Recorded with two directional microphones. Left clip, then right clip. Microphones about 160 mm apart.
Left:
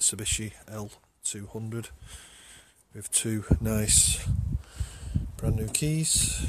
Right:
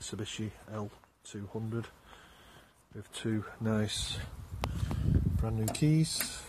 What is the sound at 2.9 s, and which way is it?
Speech, 45° left (ahead or behind).